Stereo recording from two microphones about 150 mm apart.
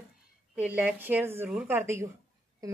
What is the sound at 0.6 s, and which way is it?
A woman's voice, 10° right (ahead or behind).